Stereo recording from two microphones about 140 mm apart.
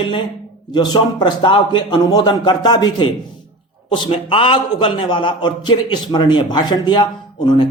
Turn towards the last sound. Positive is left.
turn(degrees=35)  # may be behind; listen again after turning